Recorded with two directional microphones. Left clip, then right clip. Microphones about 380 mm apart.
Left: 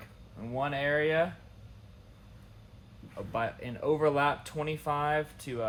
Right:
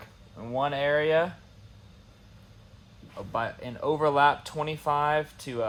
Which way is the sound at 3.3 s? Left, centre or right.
Centre.